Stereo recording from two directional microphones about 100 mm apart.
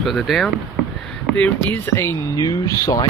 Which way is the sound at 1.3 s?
15° left (ahead or behind).